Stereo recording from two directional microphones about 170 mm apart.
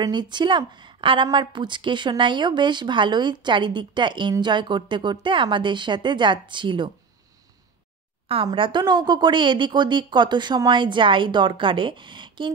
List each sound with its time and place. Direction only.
0.0 s speech: 25° right (ahead or behind)
8.3 s speech: 30° right (ahead or behind)